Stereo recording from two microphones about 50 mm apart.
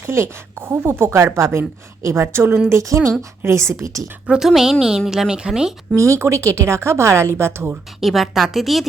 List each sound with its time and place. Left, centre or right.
0.0 s speech: right
1.4 s a woman's voice: right
2.2 s speech: right
2.6 s speech: right
3.4 s a woman's voice: right
4.3 s a woman's voice: centre
6.0 s a woman's voice: right
8.0 s a woman's voice: centre